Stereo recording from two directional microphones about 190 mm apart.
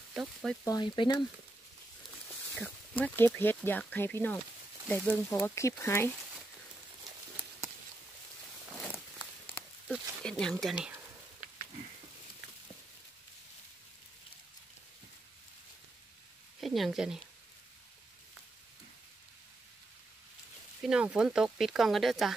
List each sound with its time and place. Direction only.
0.1 s speech: centre (ahead or behind)
0.7 s speech: 25° left (ahead or behind)
2.5 s speech: 10° left (ahead or behind)
9.6 s a sound: 5° left (ahead or behind)
10.6 s speech: 5° right (ahead or behind)
16.6 s speech: centre (ahead or behind)
20.8 s speech: 5° right (ahead or behind)